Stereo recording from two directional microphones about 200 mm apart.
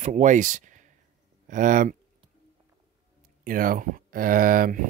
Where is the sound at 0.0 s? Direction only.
35° right (ahead or behind).